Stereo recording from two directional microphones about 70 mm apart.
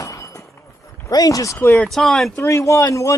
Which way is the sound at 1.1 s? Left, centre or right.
Left.